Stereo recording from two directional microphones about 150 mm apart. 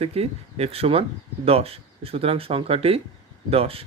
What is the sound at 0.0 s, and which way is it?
Speech, 40° right (ahead or behind).